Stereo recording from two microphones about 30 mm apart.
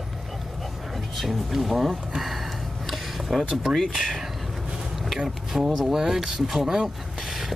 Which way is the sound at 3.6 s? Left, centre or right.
Centre.